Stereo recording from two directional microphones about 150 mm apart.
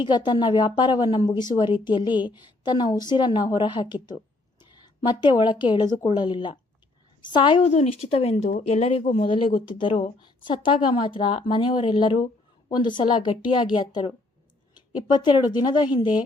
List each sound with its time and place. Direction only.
0.0 s speech: 30° left (ahead or behind)
7.7 s speech: 45° left (ahead or behind)
15.1 s speech: 30° left (ahead or behind)